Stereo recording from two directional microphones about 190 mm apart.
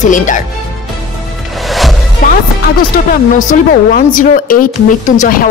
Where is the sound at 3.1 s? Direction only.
45° left (ahead or behind).